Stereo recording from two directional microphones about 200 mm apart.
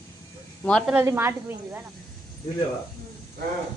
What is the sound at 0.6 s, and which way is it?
Speech, 5° left (ahead or behind).